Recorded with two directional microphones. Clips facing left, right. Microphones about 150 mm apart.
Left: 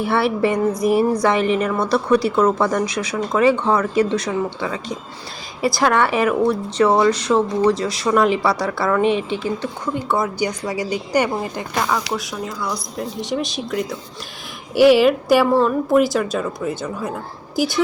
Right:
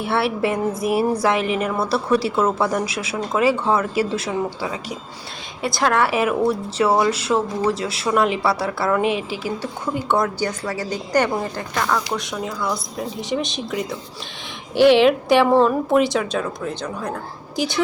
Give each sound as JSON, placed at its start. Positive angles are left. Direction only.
{"t": 0.0, "sound": "a woman's voice", "side_deg": 0}
{"t": 10.2, "sound": "a woman's voice", "side_deg": 10}